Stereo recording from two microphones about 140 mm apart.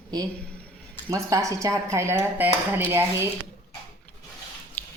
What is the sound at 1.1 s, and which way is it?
Speech, 25° right (ahead or behind).